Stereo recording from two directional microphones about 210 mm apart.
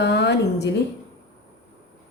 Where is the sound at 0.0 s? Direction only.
55° left (ahead or behind).